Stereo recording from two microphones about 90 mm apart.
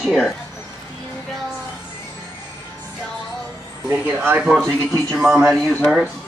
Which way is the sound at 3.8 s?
25° right (ahead or behind).